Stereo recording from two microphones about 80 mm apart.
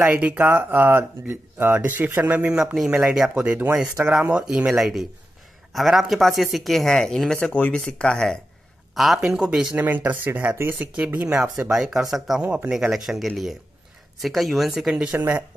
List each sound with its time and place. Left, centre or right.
0.0 s speech: centre
7.3 s speech: centre
9.8 s speech: right; by 15.0 s centre
15.0 s speech: right